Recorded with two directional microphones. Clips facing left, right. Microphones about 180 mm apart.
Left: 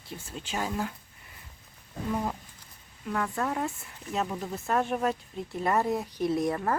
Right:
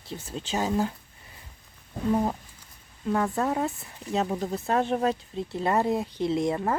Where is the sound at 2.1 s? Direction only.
30° right (ahead or behind).